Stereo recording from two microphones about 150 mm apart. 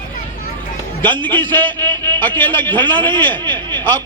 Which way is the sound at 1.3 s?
15° left (ahead or behind).